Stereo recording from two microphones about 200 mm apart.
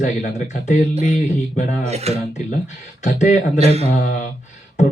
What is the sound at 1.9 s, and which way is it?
Speech, 30° right (ahead or behind).